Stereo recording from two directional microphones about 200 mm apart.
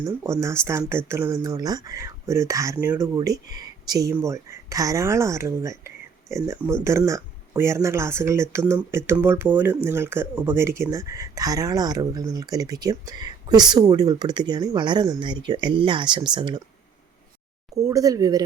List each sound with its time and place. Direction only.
0.0 s speech: 15° right (ahead or behind)
17.7 s speech: 15° right (ahead or behind)